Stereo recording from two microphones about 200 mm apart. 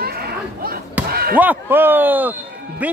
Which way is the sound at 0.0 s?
50° right (ahead or behind).